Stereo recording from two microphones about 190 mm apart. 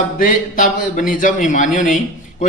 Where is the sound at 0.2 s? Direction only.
45° left (ahead or behind).